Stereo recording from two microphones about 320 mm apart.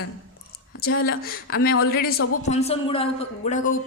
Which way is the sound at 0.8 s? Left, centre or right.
Left.